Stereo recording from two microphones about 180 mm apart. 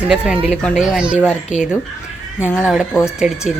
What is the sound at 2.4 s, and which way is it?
Speech, 15° left (ahead or behind).